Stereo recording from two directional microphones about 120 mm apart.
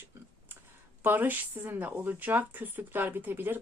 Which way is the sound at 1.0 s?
15° right (ahead or behind).